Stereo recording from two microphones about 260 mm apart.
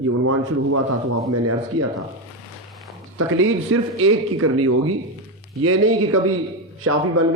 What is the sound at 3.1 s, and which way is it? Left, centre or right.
A man's voice, right.